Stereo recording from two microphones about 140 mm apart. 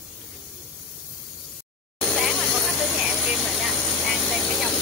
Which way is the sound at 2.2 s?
Centre (ahead or behind).